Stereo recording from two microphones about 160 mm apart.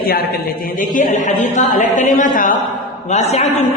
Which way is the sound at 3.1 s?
45° left (ahead or behind).